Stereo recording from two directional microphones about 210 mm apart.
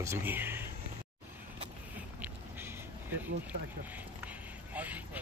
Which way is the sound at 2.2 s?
10° right (ahead or behind).